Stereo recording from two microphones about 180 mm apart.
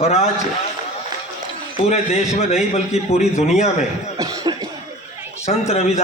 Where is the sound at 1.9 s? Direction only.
40° left (ahead or behind).